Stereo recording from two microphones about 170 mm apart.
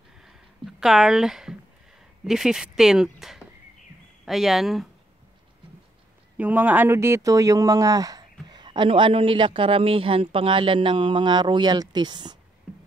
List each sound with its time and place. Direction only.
0.2 s a sound: centre (ahead or behind)
2.2 s speech: centre (ahead or behind)
6.3 s speech: 10° right (ahead or behind); by 12.4 s 25° right (ahead or behind)